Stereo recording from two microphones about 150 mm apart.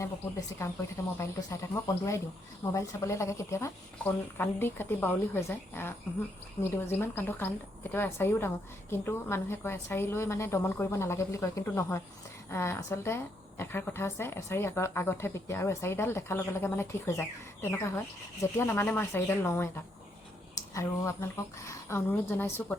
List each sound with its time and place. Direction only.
0.0 s a woman's voice: 20° left (ahead or behind)